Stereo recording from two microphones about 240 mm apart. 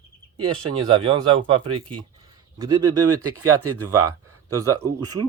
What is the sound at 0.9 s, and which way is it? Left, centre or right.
Speech, centre.